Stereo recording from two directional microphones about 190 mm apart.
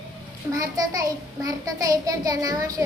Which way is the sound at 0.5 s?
20° right (ahead or behind).